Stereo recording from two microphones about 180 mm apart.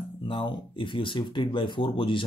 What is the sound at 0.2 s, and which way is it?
Speech, 30° left (ahead or behind).